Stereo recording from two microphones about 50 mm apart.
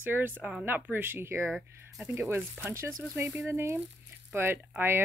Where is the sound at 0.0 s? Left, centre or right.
Right.